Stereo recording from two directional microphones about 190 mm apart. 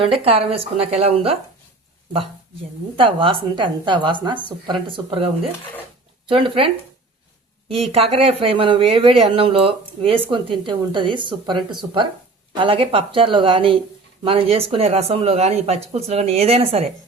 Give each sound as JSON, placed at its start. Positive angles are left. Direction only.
{"t": 0.0, "sound": "speech", "side_deg": -30}
{"t": 3.0, "sound": "speech", "side_deg": -25}
{"t": 7.7, "sound": "speech", "side_deg": -30}